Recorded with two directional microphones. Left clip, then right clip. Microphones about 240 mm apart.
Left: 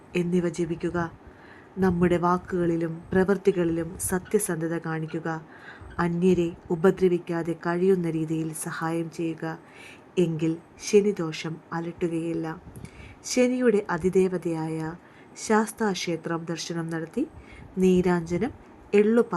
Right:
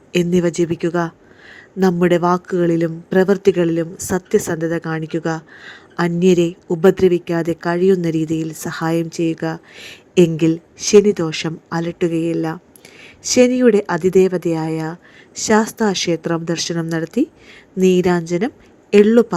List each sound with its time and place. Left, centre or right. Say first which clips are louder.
0.1 s a woman's voice: right 10 dB; centre